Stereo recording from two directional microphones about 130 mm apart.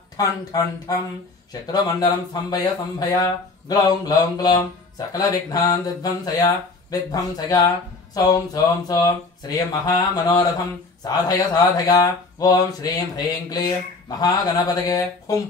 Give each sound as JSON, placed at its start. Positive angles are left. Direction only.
{"t": 0.2, "sound": "speech", "side_deg": 30}